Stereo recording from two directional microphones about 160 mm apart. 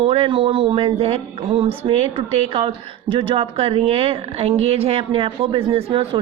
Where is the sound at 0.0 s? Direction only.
35° right (ahead or behind).